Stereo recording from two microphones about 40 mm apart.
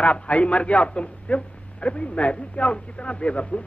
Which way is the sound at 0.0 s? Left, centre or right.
Left.